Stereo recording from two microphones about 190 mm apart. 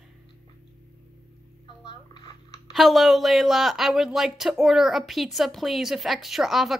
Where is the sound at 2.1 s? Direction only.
25° left (ahead or behind).